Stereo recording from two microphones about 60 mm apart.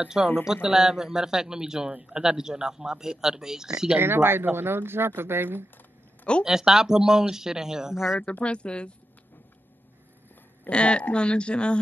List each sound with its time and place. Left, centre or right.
0.2 s a man's voice: centre
4.0 s speech: right
6.4 s a man's voice: centre
8.2 s a woman's voice: left
10.7 s a woman's voice: centre